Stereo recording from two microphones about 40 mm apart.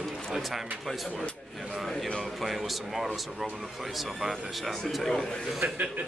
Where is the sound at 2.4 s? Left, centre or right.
Centre.